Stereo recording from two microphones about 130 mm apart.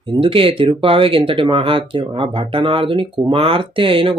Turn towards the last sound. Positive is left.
turn(degrees=-45)  # may be behind; listen again after turning